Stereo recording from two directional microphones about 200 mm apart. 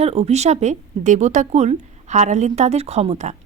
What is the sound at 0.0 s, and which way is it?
Speech, 35° right (ahead or behind).